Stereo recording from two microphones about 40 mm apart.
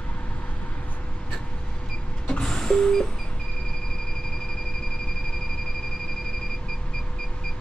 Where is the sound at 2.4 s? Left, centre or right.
Centre.